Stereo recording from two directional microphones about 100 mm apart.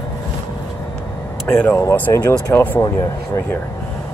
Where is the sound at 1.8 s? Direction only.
20° left (ahead or behind).